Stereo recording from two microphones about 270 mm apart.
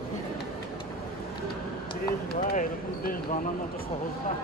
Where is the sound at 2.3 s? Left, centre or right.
Left.